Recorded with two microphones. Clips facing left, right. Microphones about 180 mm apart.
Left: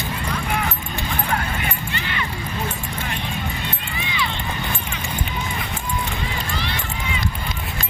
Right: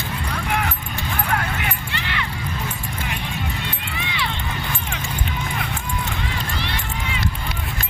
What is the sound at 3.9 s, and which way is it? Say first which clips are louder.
Run: left 1 dB; 65° right (ahead or behind).